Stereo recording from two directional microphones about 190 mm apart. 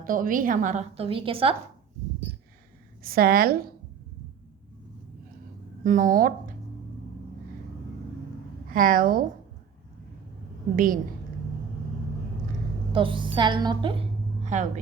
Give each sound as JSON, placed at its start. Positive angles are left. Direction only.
{"t": 0.0, "sound": "a woman's voice", "side_deg": -45}
{"t": 3.0, "sound": "speech", "side_deg": -50}
{"t": 5.8, "sound": "speech", "side_deg": -40}
{"t": 8.7, "sound": "speech", "side_deg": -45}
{"t": 10.8, "sound": "speech", "side_deg": -45}
{"t": 12.9, "sound": "a woman's voice", "side_deg": -25}
{"t": 14.4, "sound": "a woman's voice", "side_deg": -40}